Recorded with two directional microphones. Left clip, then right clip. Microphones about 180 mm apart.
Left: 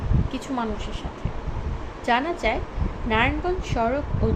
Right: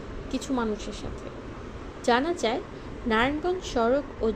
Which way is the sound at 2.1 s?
35° right (ahead or behind).